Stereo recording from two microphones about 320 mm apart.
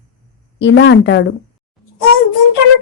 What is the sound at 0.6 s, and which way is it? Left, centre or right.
Speech, left.